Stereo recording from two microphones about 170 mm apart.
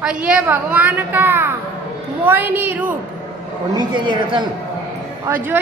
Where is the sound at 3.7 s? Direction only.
25° right (ahead or behind).